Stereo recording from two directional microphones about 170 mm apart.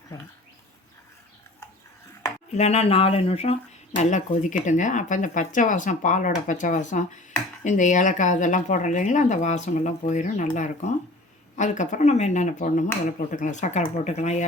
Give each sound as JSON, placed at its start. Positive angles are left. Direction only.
{"t": 2.5, "sound": "speech", "side_deg": 40}